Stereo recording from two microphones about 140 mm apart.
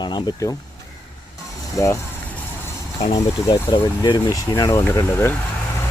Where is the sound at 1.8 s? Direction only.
20° left (ahead or behind).